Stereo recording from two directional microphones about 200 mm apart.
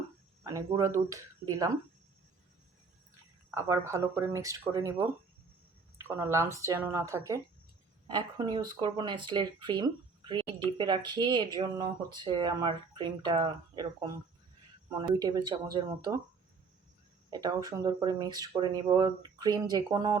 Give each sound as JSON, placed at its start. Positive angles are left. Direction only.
{"t": 0.4, "sound": "speech", "side_deg": -15}
{"t": 3.5, "sound": "speech", "side_deg": -15}
{"t": 15.1, "sound": "speech", "side_deg": -20}
{"t": 17.3, "sound": "speech", "side_deg": -20}